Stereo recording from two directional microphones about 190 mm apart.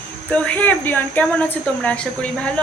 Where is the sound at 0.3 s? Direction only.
5° left (ahead or behind).